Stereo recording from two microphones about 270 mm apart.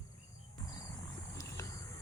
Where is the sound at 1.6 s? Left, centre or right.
Centre.